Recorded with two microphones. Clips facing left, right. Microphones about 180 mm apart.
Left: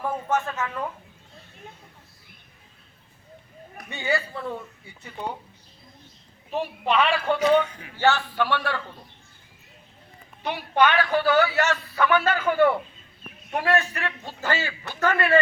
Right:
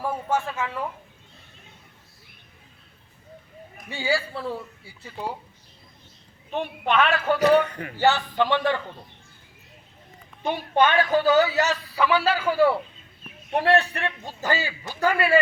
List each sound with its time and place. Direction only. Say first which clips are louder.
0.0 s a woman's voice: even; 10° right (ahead or behind)
4.0 s a woman's voice: right 1 dB; 5° right (ahead or behind)
6.5 s a woman's voice: even; centre (ahead or behind)
7.3 s a man's voice: right 3 dB; 65° right (ahead or behind)
7.9 s a man's voice: right 1 dB; 15° right (ahead or behind)
10.8 s a man's voice: right 1 dB; 25° right (ahead or behind)
13.5 s a man's voice: right 3 dB; 30° right (ahead or behind)
14.3 s a man's voice: even; 15° right (ahead or behind)